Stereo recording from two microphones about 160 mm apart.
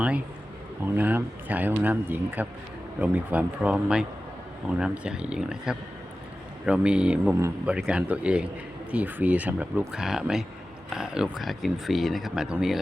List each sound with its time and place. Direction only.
0.9 s speech: 10° right (ahead or behind)
7.3 s speech: 15° right (ahead or behind)
7.7 s speech: 5° right (ahead or behind)